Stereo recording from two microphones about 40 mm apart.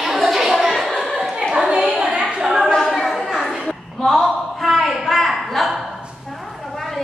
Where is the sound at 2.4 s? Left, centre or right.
Centre.